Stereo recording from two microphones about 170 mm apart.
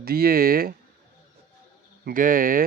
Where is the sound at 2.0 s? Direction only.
55° right (ahead or behind).